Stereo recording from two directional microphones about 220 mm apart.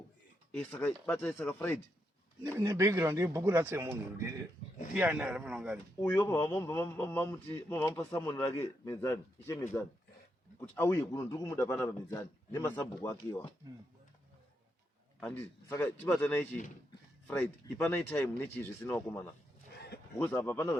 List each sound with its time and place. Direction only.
0.5 s a man's voice: 5° left (ahead or behind)
2.4 s a man's voice: 10° right (ahead or behind)
6.0 s a man's voice: 10° left (ahead or behind)
15.7 s a man's voice: 10° left (ahead or behind)
19.7 s a sound: 45° left (ahead or behind)
20.1 s a man's voice: 10° left (ahead or behind)